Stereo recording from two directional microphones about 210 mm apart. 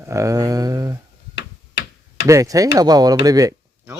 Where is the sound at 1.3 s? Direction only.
55° left (ahead or behind).